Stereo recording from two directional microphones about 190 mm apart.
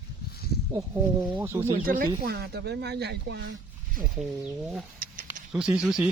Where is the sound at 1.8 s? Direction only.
45° right (ahead or behind).